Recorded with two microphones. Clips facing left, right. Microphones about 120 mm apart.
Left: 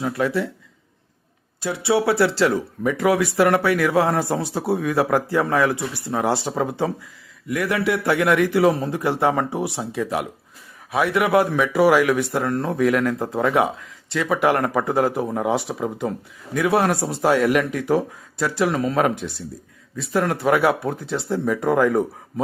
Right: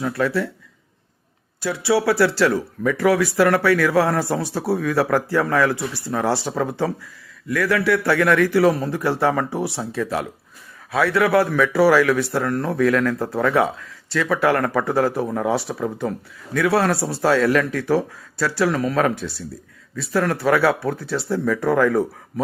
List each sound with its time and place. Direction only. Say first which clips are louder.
0.0 s speech: right 1 dB; 20° left (ahead or behind)
1.6 s speech: right 1 dB; 25° left (ahead or behind)